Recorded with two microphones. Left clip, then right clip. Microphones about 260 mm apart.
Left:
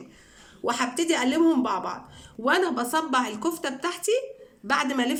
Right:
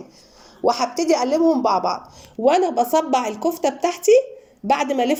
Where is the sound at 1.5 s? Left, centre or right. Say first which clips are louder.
Right 7 dB; left.